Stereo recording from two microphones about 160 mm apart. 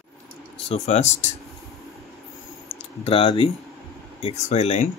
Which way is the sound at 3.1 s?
35° left (ahead or behind).